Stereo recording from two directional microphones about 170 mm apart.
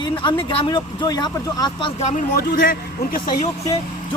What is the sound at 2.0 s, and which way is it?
Speech, 45° left (ahead or behind).